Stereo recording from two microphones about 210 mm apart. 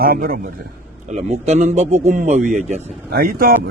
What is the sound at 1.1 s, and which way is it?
A man's voice, 35° right (ahead or behind).